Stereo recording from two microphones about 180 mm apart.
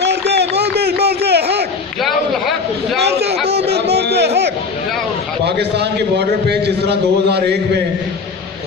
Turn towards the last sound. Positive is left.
turn(degrees=-65)  # may be behind; listen again after turning